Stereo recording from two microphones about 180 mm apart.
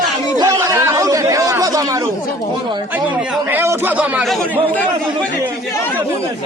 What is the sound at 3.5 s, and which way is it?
Speech, 10° right (ahead or behind).